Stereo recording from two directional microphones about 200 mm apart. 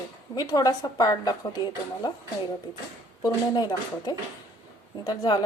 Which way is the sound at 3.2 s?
20° left (ahead or behind).